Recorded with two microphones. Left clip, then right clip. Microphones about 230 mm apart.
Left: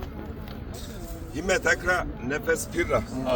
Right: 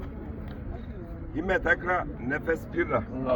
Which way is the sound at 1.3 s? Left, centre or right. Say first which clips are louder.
Left 2 dB; centre.